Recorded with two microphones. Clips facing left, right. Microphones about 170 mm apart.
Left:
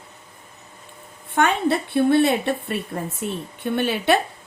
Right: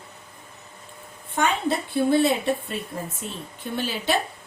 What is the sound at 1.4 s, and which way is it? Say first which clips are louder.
A woman's voice: left 4 dB; 65° left (ahead or behind).